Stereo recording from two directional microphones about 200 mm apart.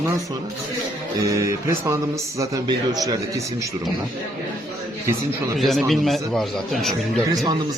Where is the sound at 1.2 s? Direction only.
15° right (ahead or behind).